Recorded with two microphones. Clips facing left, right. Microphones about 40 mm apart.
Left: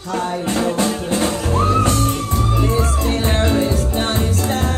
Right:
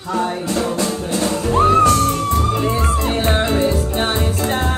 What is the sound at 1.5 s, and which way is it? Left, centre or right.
Music, right.